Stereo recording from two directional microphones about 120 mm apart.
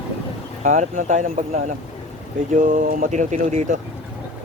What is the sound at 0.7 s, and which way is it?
A man's voice, 90° right.